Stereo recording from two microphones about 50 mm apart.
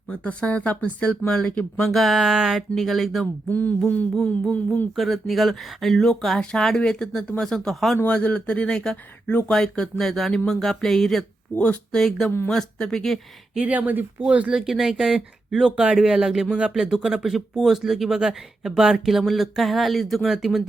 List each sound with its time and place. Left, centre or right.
0.1 s speech: left
1.3 s speech: centre
1.9 s speech: centre
3.5 s a sound: left
4.4 s speech: left
4.9 s speech: centre
6.4 s speech: centre
8.0 s speech: left; by 11.3 s centre
11.5 s speech: left
12.5 s speech: centre
13.6 s speech: right
14.2 s speech: right
14.5 s speech: centre